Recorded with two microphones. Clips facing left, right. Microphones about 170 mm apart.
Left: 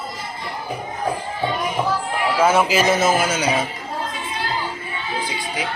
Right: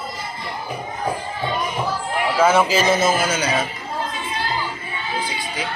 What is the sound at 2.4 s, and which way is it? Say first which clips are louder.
Speech: even; 10° left (ahead or behind).